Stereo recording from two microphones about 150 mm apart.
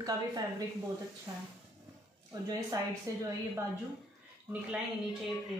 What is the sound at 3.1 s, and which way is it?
Speech, 20° right (ahead or behind).